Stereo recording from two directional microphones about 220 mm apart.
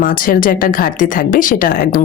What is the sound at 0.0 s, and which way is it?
Speech, 40° left (ahead or behind).